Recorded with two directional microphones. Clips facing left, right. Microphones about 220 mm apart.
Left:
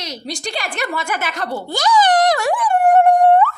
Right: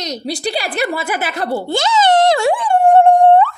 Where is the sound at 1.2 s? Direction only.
35° right (ahead or behind).